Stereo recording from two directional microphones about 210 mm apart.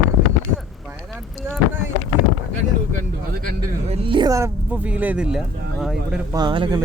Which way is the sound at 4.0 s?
25° right (ahead or behind).